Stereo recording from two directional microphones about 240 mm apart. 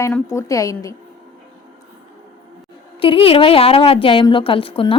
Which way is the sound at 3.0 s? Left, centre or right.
Left.